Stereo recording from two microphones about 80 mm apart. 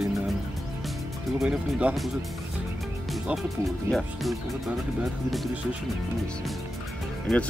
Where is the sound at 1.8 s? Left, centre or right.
Centre.